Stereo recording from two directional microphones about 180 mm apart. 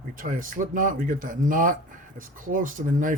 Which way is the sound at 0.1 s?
50° right (ahead or behind).